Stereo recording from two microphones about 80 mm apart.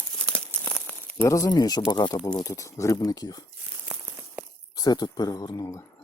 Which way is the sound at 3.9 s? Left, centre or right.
Right.